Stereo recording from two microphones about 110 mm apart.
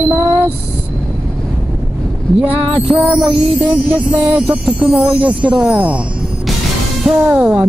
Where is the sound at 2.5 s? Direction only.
60° right (ahead or behind).